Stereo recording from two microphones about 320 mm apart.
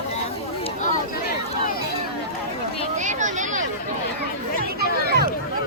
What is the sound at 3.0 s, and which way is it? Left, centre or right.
Speech, right.